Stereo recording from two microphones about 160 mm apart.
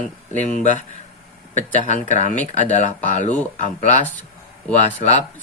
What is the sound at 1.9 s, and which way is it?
Speech, 50° left (ahead or behind).